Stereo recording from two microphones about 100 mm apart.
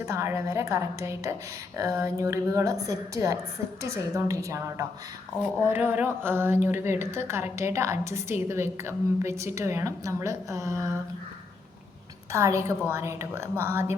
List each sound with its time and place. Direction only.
0.0 s a woman's voice: 30° right (ahead or behind)
5.6 s a woman's voice: 20° right (ahead or behind)
12.3 s a woman's voice: 30° right (ahead or behind)